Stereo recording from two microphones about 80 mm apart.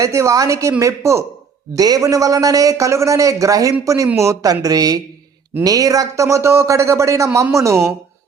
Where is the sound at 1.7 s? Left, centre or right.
Right.